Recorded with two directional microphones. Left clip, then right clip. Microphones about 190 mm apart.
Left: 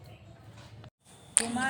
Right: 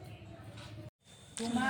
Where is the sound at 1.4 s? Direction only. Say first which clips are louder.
Left 8 dB; 50° left (ahead or behind).